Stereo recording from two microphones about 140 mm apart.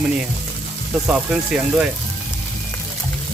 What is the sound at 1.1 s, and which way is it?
Speech, 10° right (ahead or behind).